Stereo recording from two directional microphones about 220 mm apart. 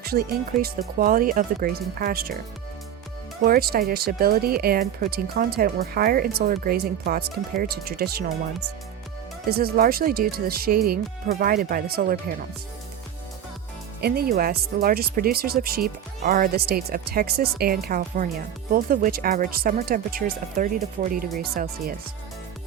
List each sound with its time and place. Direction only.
0.0 s speech: 45° right (ahead or behind)
3.4 s speech: 45° right (ahead or behind)
9.5 s speech: 45° right (ahead or behind)
14.0 s speech: 45° right (ahead or behind)